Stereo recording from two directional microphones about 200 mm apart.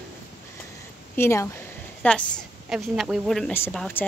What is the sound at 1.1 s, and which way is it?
A woman's voice, 15° left (ahead or behind).